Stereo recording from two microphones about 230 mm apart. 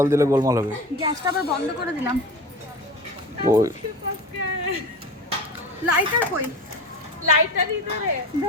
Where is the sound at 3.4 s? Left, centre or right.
Centre.